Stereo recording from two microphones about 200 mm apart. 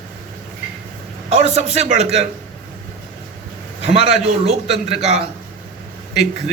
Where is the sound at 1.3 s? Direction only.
30° right (ahead or behind).